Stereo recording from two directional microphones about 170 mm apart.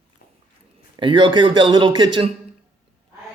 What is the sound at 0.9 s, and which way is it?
Speech, 30° right (ahead or behind).